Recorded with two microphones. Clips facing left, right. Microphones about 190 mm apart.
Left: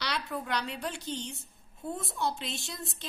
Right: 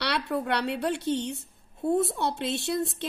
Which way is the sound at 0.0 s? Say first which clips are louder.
Right 7 dB; 65° right (ahead or behind).